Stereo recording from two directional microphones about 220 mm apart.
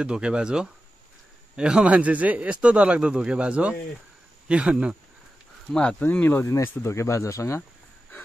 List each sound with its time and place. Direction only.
0.0 s speech: 5° right (ahead or behind)
5.7 s speech: 5° left (ahead or behind)